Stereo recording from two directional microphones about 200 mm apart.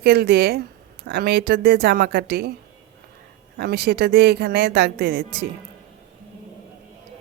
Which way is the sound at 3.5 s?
50° right (ahead or behind).